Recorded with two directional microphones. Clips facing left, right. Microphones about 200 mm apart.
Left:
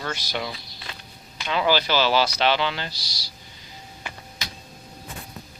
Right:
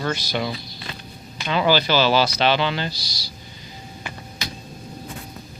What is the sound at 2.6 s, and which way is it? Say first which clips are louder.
Speech: right 3 dB; centre (ahead or behind).